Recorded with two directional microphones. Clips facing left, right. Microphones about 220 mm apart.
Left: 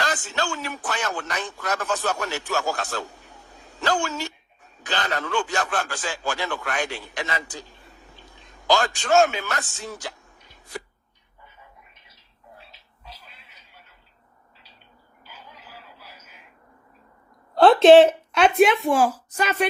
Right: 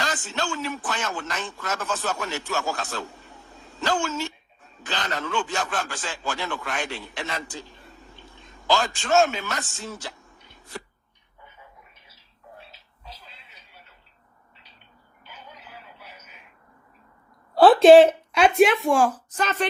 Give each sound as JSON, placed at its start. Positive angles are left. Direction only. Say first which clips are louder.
{"t": 0.0, "sound": "a man's voice", "louder": "left 2 dB", "side_deg": 0}
{"t": 7.5, "sound": "a sound", "louder": "right 1 dB", "side_deg": 0}
{"t": 17.5, "sound": "speech", "louder": "even", "side_deg": -5}